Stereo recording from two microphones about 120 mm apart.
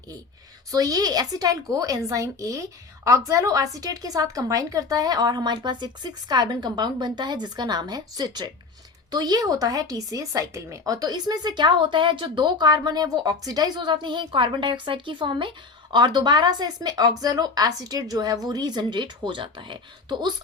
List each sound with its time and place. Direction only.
0.7 s speech: 30° right (ahead or behind)